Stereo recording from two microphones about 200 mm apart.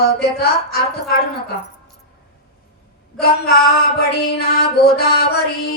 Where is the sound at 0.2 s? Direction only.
50° left (ahead or behind).